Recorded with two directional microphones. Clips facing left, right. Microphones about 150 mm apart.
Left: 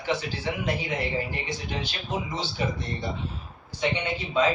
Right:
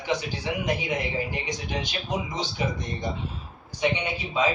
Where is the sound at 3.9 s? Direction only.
10° right (ahead or behind).